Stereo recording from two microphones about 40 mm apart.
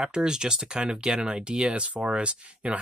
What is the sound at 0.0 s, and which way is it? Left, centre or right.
Speech, centre.